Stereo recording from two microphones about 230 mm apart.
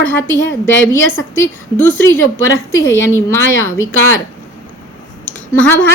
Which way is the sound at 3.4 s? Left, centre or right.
Left.